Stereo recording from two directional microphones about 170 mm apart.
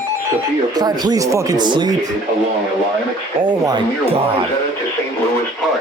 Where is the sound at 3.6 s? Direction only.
25° right (ahead or behind).